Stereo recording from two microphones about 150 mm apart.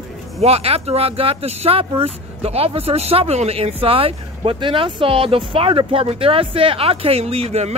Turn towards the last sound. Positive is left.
turn(degrees=-45)  # may be behind; listen again after turning